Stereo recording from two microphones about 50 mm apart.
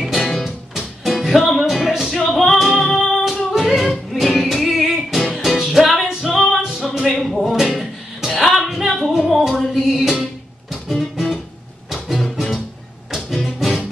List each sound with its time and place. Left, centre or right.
0.2 s music: centre
0.7 s music: centre